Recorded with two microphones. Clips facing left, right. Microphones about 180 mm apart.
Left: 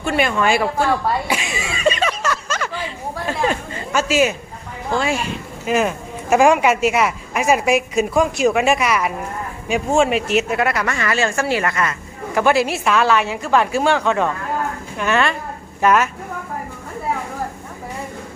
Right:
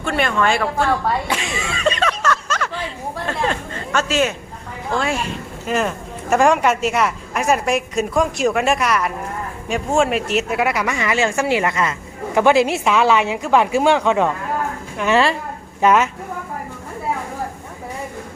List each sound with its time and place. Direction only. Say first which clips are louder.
0.0 s speech: left 1 dB; 5° left (ahead or behind)
3.2 s a sound: left 2 dB; 10° left (ahead or behind)
4.9 s a woman's voice: left 1 dB; centre (ahead or behind); by 14.3 s 15° right (ahead or behind)
15.0 s a woman's voice: right 2 dB; 30° right (ahead or behind)